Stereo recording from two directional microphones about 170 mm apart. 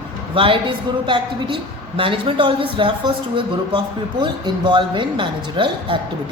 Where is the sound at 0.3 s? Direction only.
30° right (ahead or behind).